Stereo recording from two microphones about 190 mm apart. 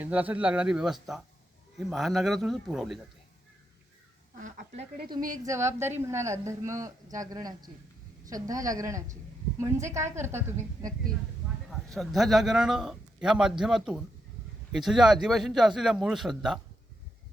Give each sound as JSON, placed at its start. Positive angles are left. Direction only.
{"t": 0.0, "sound": "a man's voice", "side_deg": -10}
{"t": 4.4, "sound": "speech", "side_deg": -45}
{"t": 4.8, "sound": "speech", "side_deg": -55}
{"t": 5.5, "sound": "speech", "side_deg": -15}
{"t": 11.7, "sound": "a man's voice", "side_deg": 0}